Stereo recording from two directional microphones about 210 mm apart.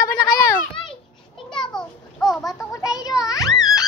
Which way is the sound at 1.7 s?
5° left (ahead or behind).